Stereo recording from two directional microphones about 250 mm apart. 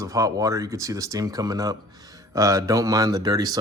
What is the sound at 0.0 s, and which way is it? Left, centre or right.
Speech, centre.